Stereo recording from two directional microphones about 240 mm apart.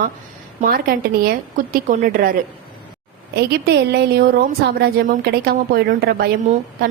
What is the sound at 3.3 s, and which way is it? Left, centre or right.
A woman's voice, right.